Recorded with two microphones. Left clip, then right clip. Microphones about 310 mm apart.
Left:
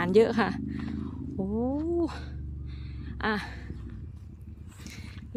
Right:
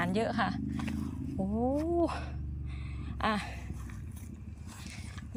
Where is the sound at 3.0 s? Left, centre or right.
Centre.